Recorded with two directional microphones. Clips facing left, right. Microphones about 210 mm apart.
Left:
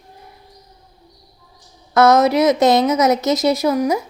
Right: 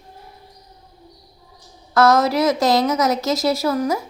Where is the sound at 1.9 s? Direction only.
20° left (ahead or behind).